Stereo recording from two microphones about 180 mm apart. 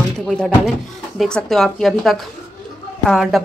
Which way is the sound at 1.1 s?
Centre (ahead or behind).